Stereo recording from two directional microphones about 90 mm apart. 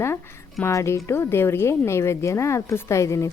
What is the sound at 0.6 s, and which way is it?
A woman's voice, 30° left (ahead or behind).